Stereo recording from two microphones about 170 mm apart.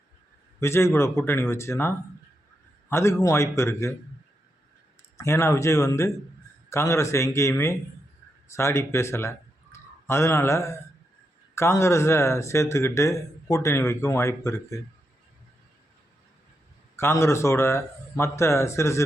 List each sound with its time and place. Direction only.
0.6 s speech: 15° left (ahead or behind)
5.1 s speech: 15° left (ahead or behind)
17.0 s speech: 15° left (ahead or behind)